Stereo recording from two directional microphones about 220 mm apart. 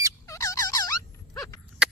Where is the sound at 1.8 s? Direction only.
5° right (ahead or behind).